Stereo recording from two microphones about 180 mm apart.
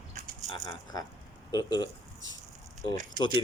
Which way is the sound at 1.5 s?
20° left (ahead or behind).